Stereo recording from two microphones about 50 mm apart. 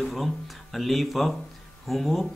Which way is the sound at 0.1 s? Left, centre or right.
Centre.